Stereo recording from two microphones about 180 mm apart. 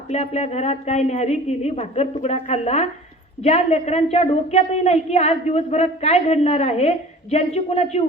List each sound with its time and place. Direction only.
0.1 s a woman's voice: 35° left (ahead or behind)